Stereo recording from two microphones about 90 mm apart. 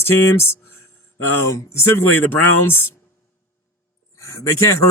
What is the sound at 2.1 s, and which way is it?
Speech, 20° left (ahead or behind).